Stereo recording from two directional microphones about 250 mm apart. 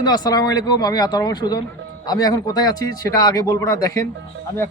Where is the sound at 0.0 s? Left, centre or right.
Centre.